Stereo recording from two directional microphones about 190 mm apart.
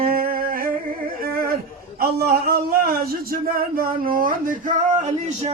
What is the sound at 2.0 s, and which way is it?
A man's voice, 55° right (ahead or behind).